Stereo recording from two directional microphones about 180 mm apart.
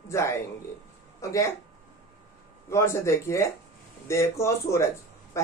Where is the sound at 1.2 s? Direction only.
15° left (ahead or behind).